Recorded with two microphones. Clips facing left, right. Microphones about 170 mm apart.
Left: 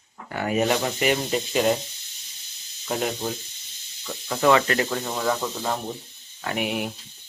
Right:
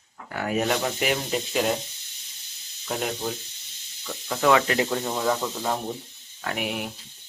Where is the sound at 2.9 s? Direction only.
Centre (ahead or behind).